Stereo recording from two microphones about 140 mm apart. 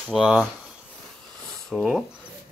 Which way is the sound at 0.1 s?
5° right (ahead or behind).